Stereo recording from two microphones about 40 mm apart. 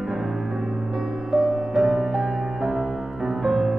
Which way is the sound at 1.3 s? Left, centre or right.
Centre.